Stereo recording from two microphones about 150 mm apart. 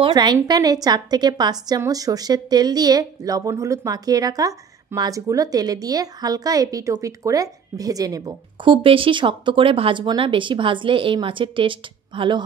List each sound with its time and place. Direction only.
0.0 s a woman's voice: 30° right (ahead or behind)